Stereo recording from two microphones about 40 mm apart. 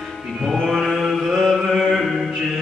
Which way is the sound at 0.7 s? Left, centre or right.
Centre.